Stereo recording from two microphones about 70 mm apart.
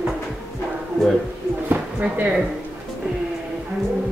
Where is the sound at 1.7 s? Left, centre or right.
Right.